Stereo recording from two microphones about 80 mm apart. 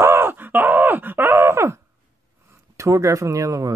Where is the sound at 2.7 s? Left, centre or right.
Right.